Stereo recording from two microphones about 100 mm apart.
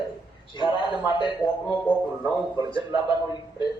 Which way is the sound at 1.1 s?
50° left (ahead or behind).